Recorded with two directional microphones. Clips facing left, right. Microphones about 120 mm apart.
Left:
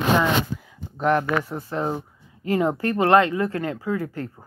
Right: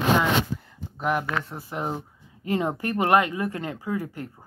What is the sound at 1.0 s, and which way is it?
Speech, 10° right (ahead or behind).